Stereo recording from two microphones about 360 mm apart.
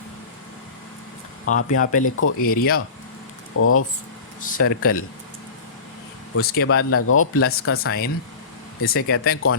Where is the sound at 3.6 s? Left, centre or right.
Left.